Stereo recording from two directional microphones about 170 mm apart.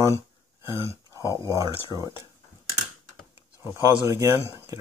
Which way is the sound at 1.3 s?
20° right (ahead or behind).